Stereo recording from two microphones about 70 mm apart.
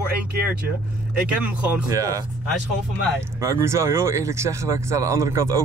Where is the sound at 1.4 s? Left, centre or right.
Right.